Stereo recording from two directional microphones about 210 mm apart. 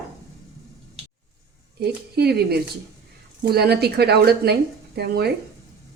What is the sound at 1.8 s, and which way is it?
Speech, 50° right (ahead or behind).